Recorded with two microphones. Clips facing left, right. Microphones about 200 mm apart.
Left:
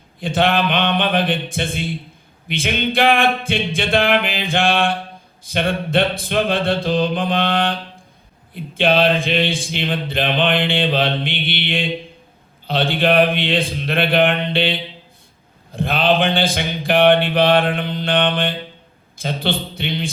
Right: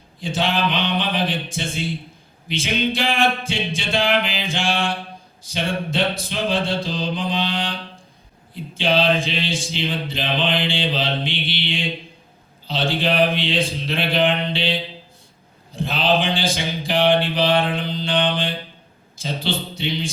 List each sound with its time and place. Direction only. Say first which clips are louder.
0.2 s speech: left 4 dB; 55° left (ahead or behind)